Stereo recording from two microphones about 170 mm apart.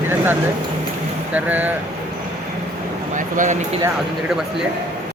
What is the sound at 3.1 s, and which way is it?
Speech, 50° right (ahead or behind).